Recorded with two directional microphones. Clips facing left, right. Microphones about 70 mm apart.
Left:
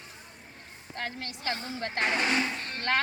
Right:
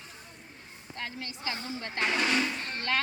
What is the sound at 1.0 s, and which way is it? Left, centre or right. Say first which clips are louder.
A woman's voice: left 2 dB; left.